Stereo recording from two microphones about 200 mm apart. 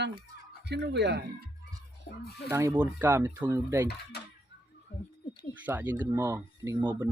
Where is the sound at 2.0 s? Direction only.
55° left (ahead or behind).